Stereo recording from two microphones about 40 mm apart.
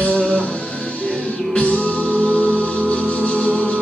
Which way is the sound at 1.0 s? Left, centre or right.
Left.